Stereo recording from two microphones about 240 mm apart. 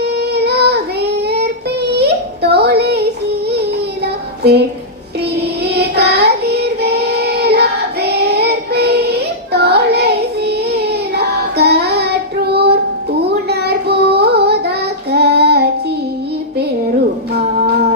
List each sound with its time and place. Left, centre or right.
0.0 s child singing: right
4.0 s child singing: right
5.6 s child singing: right
12.5 s music: right
13.2 s child singing: right